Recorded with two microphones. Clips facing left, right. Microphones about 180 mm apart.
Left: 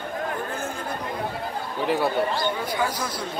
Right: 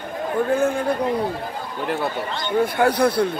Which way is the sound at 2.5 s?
60° right (ahead or behind).